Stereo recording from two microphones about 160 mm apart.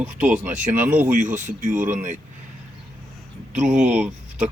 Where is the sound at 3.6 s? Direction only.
5° right (ahead or behind).